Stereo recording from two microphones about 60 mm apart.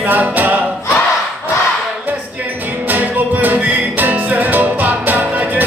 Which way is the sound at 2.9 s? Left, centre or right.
Right.